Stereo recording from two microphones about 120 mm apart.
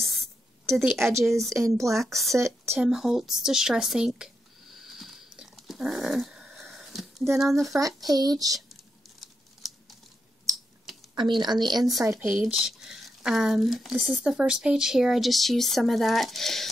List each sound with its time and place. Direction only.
0.0 s a sound: centre (ahead or behind)
1.1 s speech: 25° right (ahead or behind)
2.0 s speech: centre (ahead or behind)
2.3 s speech: 25° right (ahead or behind)
2.8 s a sound: 5° right (ahead or behind)
7.3 s speech: centre (ahead or behind)
8.1 s a woman's voice: 30° right (ahead or behind)
9.2 s crumpling: centre (ahead or behind)
11.1 s a woman's voice: 40° right (ahead or behind)
12.0 s speech: 20° right (ahead or behind)
12.3 s speech: 5° right (ahead or behind)